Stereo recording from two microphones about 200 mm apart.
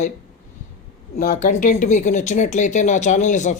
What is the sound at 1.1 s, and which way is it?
Speech, 40° left (ahead or behind).